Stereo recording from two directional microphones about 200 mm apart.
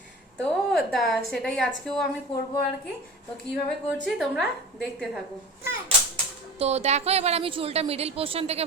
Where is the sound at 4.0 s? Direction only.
Centre (ahead or behind).